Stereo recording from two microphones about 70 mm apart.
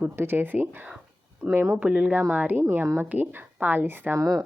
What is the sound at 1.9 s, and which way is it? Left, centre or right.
Speech, centre.